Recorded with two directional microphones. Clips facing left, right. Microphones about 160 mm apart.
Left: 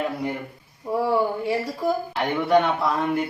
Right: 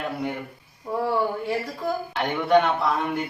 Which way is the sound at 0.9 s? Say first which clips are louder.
Left 2 dB; 10° left (ahead or behind).